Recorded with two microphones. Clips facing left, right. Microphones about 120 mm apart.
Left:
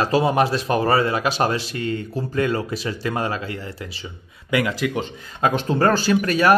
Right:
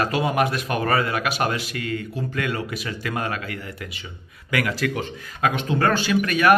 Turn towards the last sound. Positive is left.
turn(degrees=30)  # may be behind; listen again after turning